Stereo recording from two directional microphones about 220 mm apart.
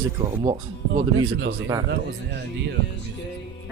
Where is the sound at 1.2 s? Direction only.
55° right (ahead or behind).